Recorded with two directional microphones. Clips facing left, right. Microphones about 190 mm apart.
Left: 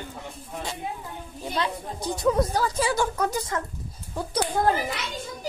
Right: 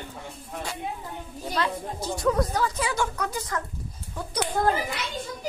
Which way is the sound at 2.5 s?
30° left (ahead or behind).